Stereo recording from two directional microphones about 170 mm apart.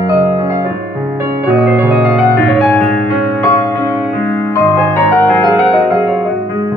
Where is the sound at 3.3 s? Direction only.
15° left (ahead or behind).